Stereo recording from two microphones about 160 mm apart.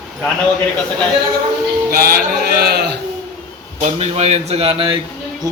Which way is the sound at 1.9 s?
70° right (ahead or behind).